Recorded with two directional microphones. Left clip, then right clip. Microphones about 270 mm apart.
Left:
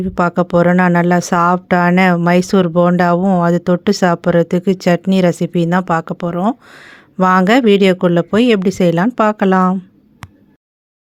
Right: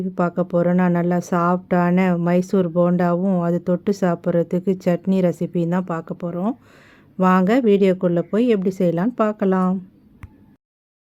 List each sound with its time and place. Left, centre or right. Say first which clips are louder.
0.1 s speech: left 7 dB; centre